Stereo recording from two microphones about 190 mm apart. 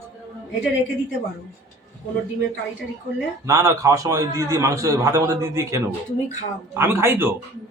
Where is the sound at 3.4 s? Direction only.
15° right (ahead or behind).